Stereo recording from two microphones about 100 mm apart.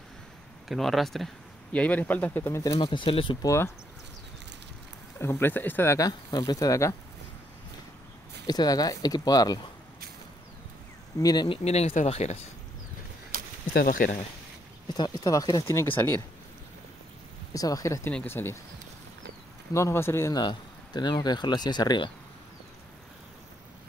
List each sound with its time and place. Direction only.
0.7 s speech: centre (ahead or behind)
1.7 s speech: 15° left (ahead or behind)
2.8 s speech: 60° left (ahead or behind)
3.4 s speech: 25° left (ahead or behind)
5.2 s speech: 20° left (ahead or behind)
5.9 s speech: 40° left (ahead or behind)
8.5 s speech: 40° left (ahead or behind)
11.1 s speech: 40° left (ahead or behind)
11.4 s speech: 75° left (ahead or behind)
15.0 s speech: 40° left (ahead or behind)
17.6 s speech: 35° left (ahead or behind)
19.7 s speech: 25° left (ahead or behind)
20.3 s speech: 45° left (ahead or behind)